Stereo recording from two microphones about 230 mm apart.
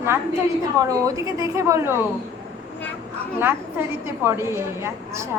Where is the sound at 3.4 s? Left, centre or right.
Centre.